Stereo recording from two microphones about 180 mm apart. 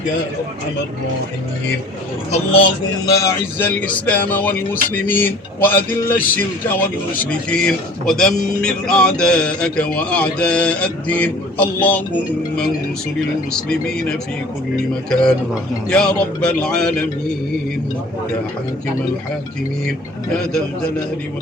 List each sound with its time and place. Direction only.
2.3 s speech: 30° left (ahead or behind)
3.1 s speech: 20° left (ahead or behind)
13.5 s speech: 5° left (ahead or behind)